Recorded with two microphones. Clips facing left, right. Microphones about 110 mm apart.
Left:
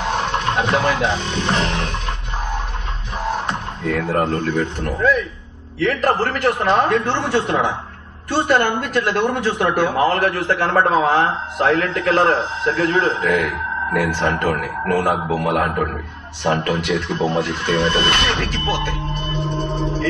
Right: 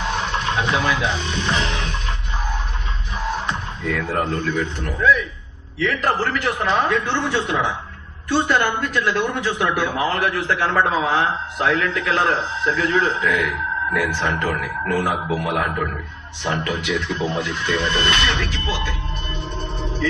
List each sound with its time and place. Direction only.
0.2 s speech: 45° left (ahead or behind)
3.4 s speech: 45° left (ahead or behind)